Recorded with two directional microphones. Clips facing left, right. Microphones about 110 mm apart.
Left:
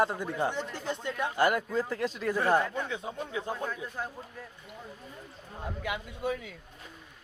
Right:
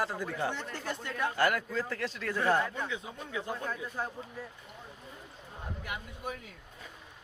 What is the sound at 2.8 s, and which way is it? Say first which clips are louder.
Speech: left 3 dB; 35° left (ahead or behind).